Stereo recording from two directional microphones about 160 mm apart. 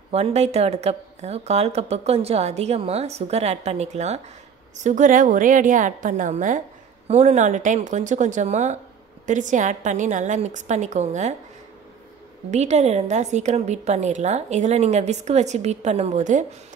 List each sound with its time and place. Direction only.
0.1 s a woman's voice: 40° right (ahead or behind)
12.4 s a woman's voice: 45° right (ahead or behind)